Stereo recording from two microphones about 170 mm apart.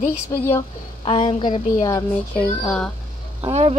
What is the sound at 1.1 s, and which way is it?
Speech, 30° left (ahead or behind).